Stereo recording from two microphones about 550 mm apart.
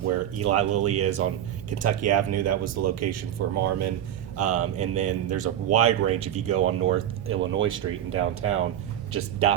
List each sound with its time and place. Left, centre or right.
0.3 s speech: right